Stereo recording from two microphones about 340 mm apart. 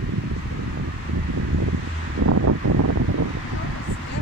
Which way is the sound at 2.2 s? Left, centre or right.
Right.